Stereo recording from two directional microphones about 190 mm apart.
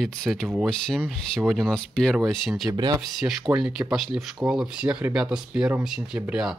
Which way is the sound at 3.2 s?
5° right (ahead or behind).